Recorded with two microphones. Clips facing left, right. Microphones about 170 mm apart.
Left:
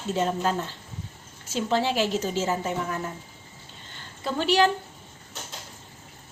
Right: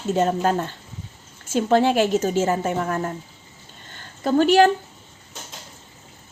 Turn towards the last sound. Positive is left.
turn(degrees=-50)  # may be behind; listen again after turning